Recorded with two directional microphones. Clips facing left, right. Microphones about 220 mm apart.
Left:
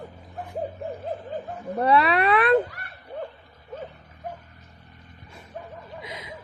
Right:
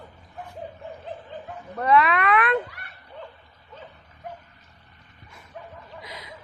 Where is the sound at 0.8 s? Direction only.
40° left (ahead or behind).